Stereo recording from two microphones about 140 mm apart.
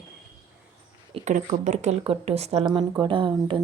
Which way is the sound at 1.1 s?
50° right (ahead or behind).